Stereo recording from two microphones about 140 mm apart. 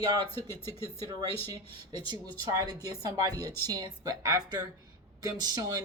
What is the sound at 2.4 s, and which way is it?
Speech, 30° right (ahead or behind).